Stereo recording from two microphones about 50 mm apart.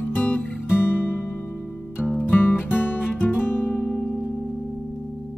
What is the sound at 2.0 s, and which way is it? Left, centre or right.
Music, centre.